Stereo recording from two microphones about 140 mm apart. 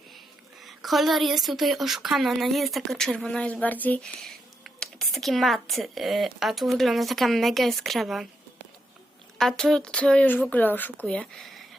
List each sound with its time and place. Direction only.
0.6 s a woman's voice: centre (ahead or behind)
9.4 s speech: 5° left (ahead or behind)